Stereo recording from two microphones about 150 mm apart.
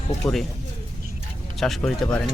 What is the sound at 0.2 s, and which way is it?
Speech, 20° left (ahead or behind).